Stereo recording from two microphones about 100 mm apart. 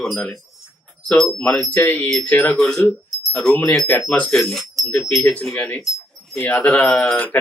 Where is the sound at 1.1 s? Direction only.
10° left (ahead or behind).